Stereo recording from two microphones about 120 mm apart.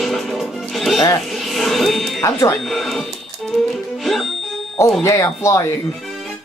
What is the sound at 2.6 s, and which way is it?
Speech, centre (ahead or behind).